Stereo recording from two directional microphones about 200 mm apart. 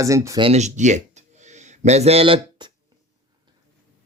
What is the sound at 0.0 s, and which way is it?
Speech, 15° right (ahead or behind).